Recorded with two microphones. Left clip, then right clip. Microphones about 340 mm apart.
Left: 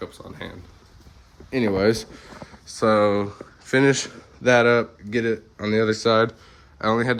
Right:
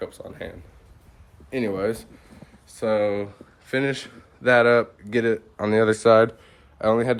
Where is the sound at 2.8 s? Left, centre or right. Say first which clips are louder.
Left 4 dB; centre.